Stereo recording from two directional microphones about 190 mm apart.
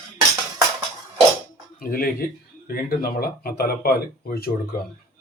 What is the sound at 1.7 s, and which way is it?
Speech, 50° left (ahead or behind).